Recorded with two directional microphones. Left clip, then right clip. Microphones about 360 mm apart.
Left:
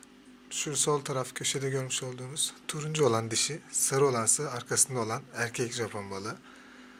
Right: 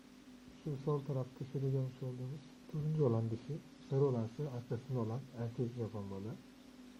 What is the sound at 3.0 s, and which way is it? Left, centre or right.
Speech, left.